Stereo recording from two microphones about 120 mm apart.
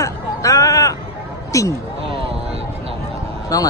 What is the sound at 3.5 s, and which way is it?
Speech, 30° left (ahead or behind).